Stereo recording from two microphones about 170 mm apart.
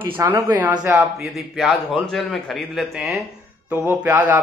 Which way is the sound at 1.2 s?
Centre (ahead or behind).